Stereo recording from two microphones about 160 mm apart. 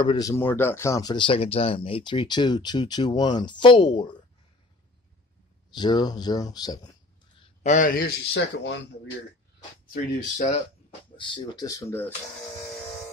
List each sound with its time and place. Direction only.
0.0 s speech: 25° left (ahead or behind)
5.8 s speech: 25° left (ahead or behind)
7.6 s speech: 55° left (ahead or behind); by 8.7 s 90° left
10.3 s speech: 50° left (ahead or behind)
11.1 s speech: 25° left (ahead or behind)